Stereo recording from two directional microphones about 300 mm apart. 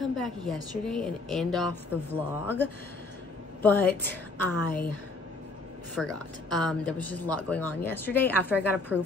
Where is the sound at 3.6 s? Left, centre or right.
Centre.